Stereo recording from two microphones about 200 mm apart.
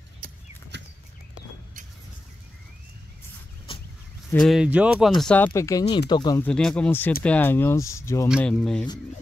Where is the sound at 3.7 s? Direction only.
25° left (ahead or behind).